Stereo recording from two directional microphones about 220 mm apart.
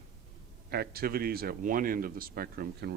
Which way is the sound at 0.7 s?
45° right (ahead or behind).